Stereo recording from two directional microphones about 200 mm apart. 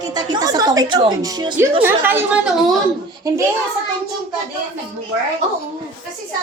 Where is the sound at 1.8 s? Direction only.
10° right (ahead or behind).